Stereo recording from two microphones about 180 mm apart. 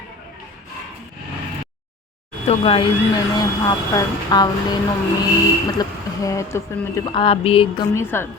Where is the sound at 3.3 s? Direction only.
20° left (ahead or behind).